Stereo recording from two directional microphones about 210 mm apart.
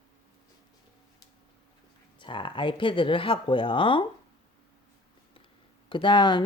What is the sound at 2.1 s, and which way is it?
Speech, 25° left (ahead or behind).